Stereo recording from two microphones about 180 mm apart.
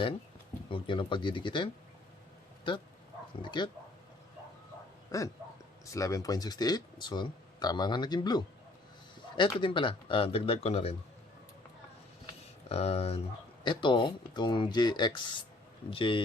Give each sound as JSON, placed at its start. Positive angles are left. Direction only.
{"t": 0.7, "sound": "speech", "side_deg": 30}
{"t": 5.1, "sound": "speech", "side_deg": 20}
{"t": 12.6, "sound": "speech", "side_deg": 35}